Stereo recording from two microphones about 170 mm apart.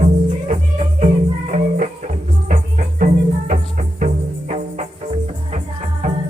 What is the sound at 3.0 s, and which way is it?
Music, 50° right (ahead or behind).